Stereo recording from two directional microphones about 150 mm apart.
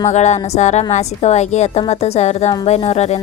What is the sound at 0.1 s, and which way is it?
A woman's voice, 50° left (ahead or behind).